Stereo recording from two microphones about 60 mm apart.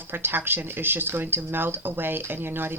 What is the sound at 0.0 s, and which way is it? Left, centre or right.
Speech, right.